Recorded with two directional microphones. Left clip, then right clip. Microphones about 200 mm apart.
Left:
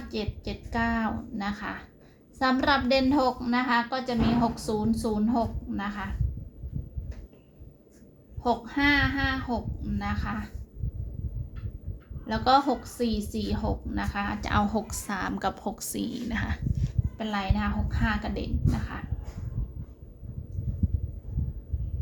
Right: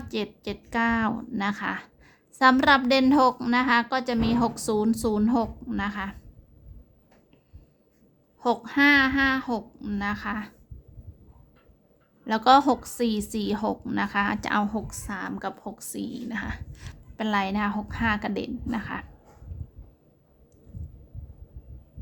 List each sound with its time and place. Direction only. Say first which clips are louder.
0.1 s a woman's voice: right 3 dB; 40° right (ahead or behind)
8.4 s a woman's voice: right 4 dB; 50° right (ahead or behind)
12.2 s a woman's voice: right 4 dB; 45° right (ahead or behind)
14.5 s a woman's voice: even; 20° right (ahead or behind)
16.7 s a woman's voice: right 1 dB; 40° right (ahead or behind)